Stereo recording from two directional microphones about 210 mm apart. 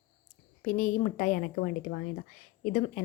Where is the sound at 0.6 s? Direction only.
40° left (ahead or behind).